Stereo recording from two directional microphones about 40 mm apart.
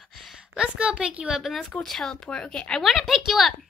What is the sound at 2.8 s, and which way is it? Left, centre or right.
Speech, centre.